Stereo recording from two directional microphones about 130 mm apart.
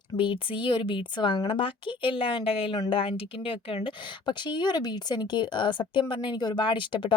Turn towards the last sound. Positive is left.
turn(degrees=40)  # may be behind; listen again after turning